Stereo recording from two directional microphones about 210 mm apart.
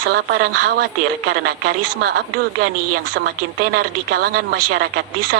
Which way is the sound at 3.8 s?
45° right (ahead or behind).